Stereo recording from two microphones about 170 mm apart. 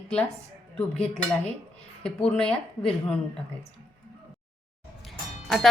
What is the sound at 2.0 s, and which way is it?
Speech, 5° left (ahead or behind).